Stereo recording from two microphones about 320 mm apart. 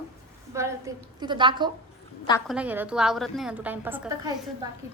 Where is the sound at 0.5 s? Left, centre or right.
Centre.